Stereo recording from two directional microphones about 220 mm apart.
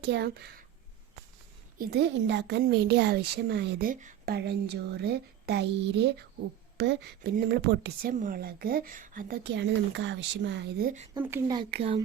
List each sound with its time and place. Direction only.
0.0 s speech: 50° right (ahead or behind)
1.8 s speech: 50° right (ahead or behind)
8.1 s speech: 40° right (ahead or behind)
11.2 s speech: 10° right (ahead or behind)
11.5 s speech: 25° right (ahead or behind)